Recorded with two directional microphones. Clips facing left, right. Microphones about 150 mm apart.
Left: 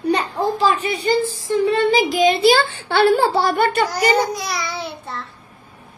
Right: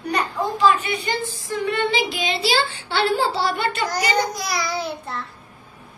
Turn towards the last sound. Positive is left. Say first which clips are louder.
# right 2 dB
turn(degrees=0)  # may be behind; listen again after turning